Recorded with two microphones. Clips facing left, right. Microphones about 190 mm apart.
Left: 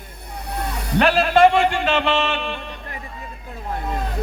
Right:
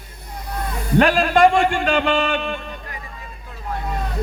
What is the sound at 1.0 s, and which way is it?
A man's voice, 45° right (ahead or behind).